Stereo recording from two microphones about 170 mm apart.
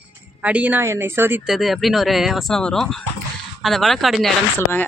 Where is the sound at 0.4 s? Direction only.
10° right (ahead or behind).